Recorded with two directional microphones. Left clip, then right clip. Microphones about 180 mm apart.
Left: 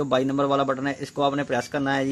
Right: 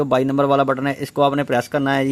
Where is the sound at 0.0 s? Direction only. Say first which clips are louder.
Right 5 dB; 45° right (ahead or behind).